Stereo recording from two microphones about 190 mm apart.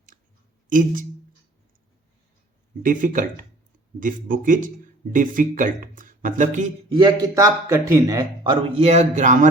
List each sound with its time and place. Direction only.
0.1 s clicking: 40° right (ahead or behind)
0.7 s speech: 45° right (ahead or behind)
2.8 s speech: 45° right (ahead or behind)
6.9 s speech: 20° right (ahead or behind)
8.7 s a man's voice: 35° right (ahead or behind)